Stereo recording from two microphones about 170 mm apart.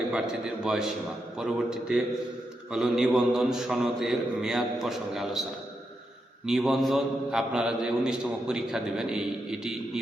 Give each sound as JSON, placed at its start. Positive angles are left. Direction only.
{"t": 0.1, "sound": "a man's voice", "side_deg": -5}